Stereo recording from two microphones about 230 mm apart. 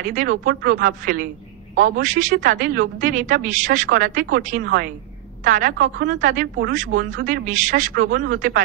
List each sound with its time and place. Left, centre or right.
0.0 s a woman's voice: right